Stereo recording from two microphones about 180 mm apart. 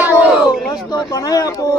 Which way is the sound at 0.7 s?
20° left (ahead or behind).